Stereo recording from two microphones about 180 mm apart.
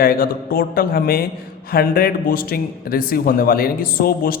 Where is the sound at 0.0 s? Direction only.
55° left (ahead or behind).